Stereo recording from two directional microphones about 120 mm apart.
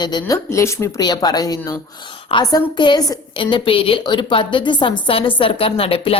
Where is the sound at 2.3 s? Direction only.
50° left (ahead or behind).